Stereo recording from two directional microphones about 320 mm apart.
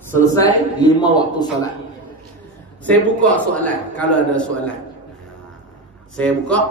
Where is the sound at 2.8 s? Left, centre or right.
Centre.